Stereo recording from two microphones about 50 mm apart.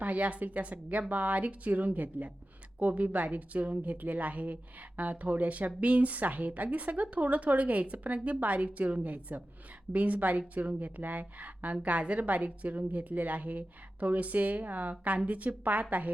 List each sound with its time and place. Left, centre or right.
0.0 s a woman's voice: right